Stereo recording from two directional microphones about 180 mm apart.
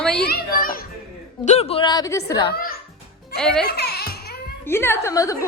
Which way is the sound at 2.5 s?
55° left (ahead or behind).